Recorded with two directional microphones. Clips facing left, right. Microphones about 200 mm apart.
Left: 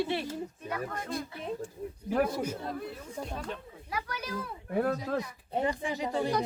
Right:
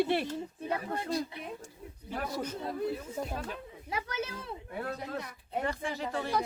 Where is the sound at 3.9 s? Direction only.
25° right (ahead or behind).